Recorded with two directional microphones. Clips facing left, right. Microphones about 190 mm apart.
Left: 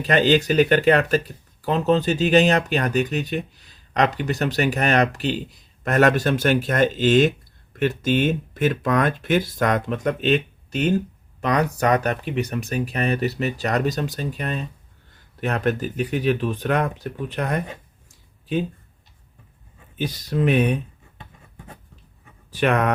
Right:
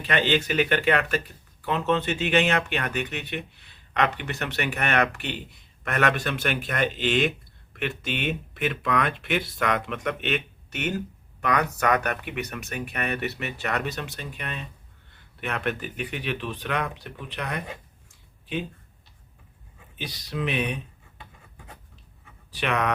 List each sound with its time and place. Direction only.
0.0 s speech: 40° left (ahead or behind)
20.0 s speech: 45° left (ahead or behind)
22.5 s speech: 45° left (ahead or behind)